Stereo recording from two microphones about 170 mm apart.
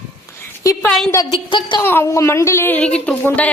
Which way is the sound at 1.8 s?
15° left (ahead or behind).